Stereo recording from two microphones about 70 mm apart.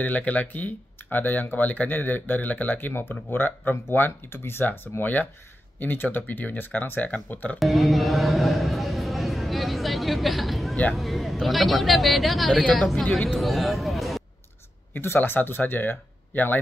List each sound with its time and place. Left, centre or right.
0.0 s speech: left
7.5 s a man's voice: centre
15.0 s speech: left